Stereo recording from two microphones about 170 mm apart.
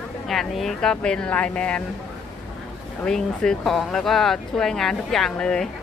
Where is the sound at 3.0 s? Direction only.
5° left (ahead or behind).